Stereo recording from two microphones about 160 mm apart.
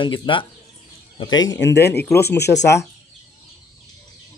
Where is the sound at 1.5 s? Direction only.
90° left.